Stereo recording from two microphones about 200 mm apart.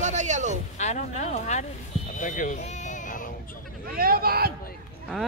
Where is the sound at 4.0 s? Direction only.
50° right (ahead or behind).